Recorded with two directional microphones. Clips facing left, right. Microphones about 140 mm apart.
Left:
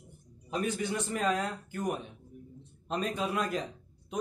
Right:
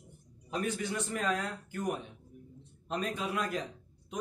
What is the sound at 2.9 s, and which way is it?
Speech, 30° left (ahead or behind).